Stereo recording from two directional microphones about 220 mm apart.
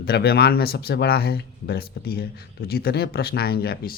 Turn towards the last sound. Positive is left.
turn(degrees=45)  # may be behind; listen again after turning